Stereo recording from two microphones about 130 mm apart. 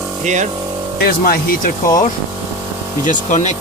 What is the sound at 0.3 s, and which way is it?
Speech, 65° right (ahead or behind).